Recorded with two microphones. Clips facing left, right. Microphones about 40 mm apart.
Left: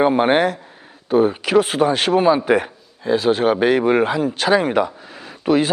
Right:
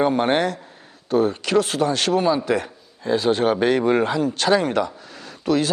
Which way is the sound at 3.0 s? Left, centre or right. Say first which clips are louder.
Left 2 dB; centre.